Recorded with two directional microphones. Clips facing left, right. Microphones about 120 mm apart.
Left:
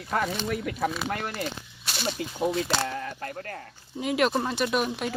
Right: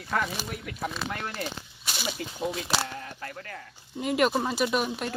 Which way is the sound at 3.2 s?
40° left (ahead or behind).